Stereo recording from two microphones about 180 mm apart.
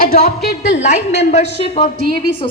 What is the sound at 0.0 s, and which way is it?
Speech, 55° left (ahead or behind).